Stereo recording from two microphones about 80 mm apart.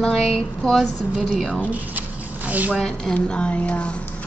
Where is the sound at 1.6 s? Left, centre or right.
Right.